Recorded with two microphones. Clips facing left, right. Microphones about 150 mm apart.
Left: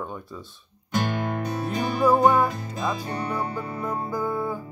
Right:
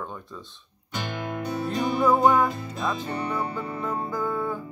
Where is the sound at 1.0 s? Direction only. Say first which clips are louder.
Left 4 dB; 50° left (ahead or behind).